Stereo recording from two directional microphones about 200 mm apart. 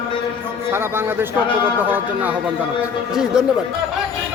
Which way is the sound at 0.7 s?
10° right (ahead or behind).